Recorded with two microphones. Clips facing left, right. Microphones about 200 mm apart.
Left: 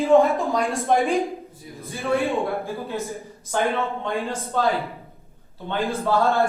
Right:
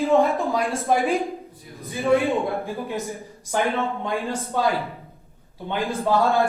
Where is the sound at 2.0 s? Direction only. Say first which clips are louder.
Right 3 dB; 15° right (ahead or behind).